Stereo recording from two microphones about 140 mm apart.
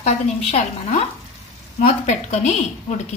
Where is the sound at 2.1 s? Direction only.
55° left (ahead or behind).